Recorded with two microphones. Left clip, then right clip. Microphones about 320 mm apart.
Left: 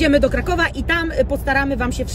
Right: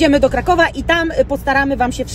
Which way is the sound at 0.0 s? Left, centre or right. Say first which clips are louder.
Right 3 dB; centre.